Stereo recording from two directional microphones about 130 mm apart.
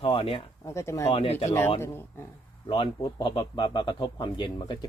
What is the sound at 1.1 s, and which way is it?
Speech, 50° left (ahead or behind).